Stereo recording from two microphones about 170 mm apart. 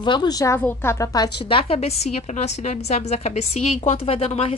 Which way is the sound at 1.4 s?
35° left (ahead or behind).